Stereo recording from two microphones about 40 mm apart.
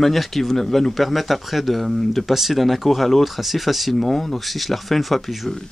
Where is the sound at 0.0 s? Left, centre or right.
Centre.